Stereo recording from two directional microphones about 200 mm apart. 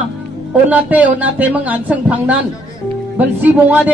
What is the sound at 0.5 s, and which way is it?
A man's voice, 5° right (ahead or behind).